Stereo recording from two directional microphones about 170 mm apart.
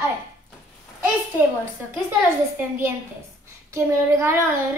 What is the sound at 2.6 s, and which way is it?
A child's voice, 15° right (ahead or behind).